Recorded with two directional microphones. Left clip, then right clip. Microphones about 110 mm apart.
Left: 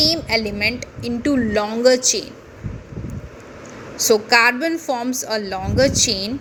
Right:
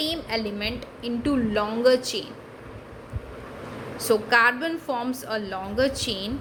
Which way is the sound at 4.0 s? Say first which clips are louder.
Left 5 dB; 45° left (ahead or behind).